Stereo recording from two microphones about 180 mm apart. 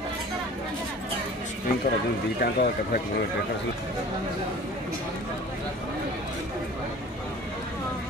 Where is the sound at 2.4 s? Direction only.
55° left (ahead or behind).